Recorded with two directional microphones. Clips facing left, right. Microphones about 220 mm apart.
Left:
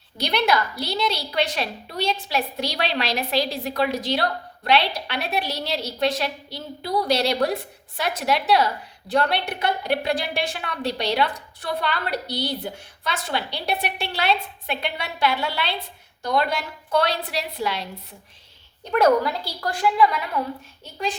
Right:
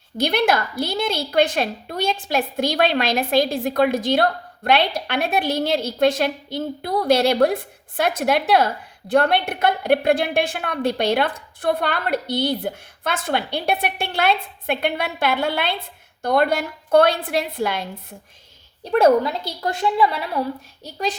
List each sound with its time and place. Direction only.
0.2 s a woman's voice: 50° right (ahead or behind)
18.9 s a woman's voice: 30° right (ahead or behind)